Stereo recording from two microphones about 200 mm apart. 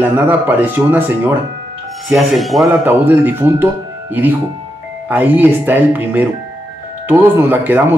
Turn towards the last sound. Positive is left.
turn(degrees=-10)  # may be behind; listen again after turning